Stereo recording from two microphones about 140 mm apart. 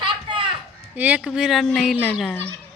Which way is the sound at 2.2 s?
10° left (ahead or behind).